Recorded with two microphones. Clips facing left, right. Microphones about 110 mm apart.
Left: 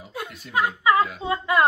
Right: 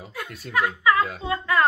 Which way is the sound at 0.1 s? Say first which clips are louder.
Even; 25° left (ahead or behind).